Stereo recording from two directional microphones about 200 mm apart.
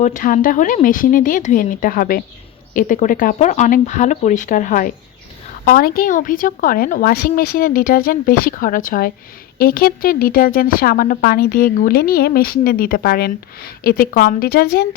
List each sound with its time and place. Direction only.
0.0 s speech: 40° left (ahead or behind)